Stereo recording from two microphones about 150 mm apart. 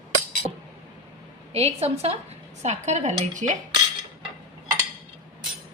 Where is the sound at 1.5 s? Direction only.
40° right (ahead or behind).